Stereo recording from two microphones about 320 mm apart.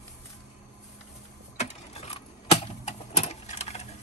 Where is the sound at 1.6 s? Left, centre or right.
Centre.